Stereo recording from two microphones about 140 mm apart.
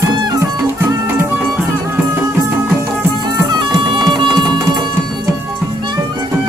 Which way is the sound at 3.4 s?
30° right (ahead or behind).